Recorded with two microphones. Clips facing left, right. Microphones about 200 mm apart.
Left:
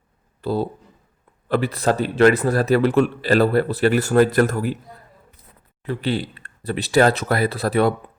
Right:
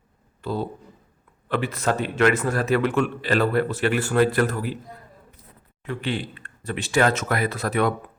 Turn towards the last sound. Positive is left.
turn(degrees=35)  # may be behind; listen again after turning